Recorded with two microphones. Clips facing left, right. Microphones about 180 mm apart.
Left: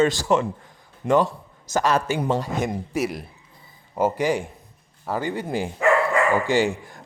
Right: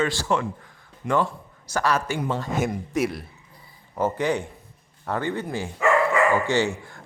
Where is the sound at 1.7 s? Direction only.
20° left (ahead or behind).